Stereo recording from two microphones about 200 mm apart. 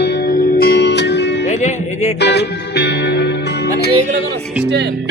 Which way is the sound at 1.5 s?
35° left (ahead or behind).